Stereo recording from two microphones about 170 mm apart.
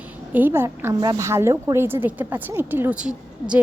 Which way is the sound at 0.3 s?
10° right (ahead or behind).